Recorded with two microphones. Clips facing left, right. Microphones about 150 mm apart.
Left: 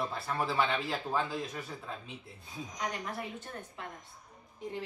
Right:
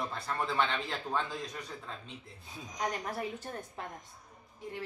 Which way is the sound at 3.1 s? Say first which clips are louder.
Right 3 dB; 35° right (ahead or behind).